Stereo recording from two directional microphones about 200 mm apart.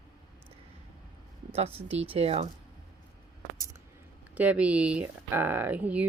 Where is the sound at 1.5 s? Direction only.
30° right (ahead or behind).